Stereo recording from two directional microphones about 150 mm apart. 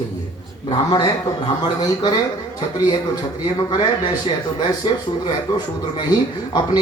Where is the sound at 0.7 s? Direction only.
25° left (ahead or behind).